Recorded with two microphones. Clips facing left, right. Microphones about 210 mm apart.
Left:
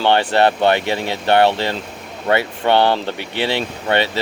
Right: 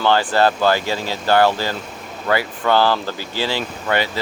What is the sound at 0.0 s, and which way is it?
Speech, 25° left (ahead or behind).